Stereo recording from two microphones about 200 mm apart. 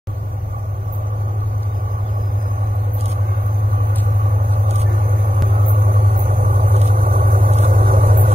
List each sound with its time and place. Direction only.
5.9 s vehicle: 45° right (ahead or behind)